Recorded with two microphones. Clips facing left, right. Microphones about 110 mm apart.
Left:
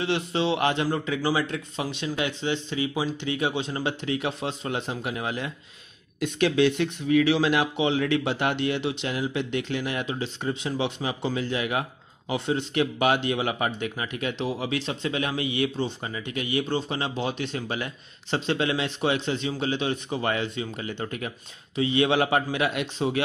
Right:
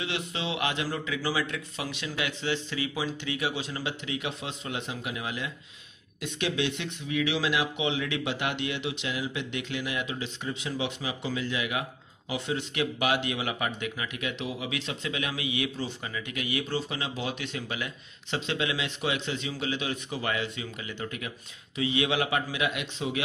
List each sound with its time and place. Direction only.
0.0 s speech: 35° left (ahead or behind)